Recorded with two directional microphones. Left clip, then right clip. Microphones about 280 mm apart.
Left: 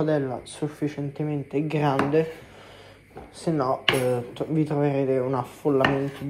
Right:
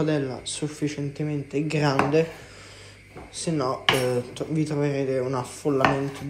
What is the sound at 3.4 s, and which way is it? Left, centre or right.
Speech, centre.